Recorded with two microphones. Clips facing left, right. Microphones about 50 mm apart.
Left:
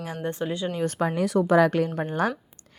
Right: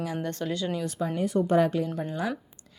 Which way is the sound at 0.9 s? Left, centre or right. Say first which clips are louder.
Left 3 dB; left.